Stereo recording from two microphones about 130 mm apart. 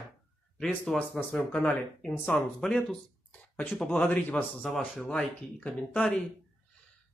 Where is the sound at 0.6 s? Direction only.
10° left (ahead or behind).